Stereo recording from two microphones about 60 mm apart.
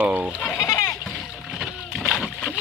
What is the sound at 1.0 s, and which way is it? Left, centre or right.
Boat, centre.